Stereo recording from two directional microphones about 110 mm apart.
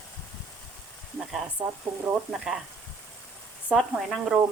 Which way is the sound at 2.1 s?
5° right (ahead or behind).